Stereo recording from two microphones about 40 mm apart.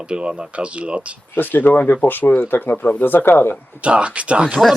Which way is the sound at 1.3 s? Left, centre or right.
Left.